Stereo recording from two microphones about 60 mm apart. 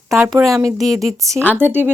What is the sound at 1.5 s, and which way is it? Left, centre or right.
Speech, right.